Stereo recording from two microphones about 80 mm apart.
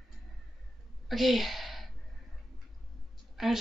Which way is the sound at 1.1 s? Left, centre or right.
Centre.